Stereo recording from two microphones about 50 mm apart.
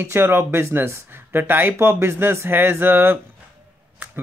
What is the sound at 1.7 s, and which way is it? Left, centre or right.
Speech, right.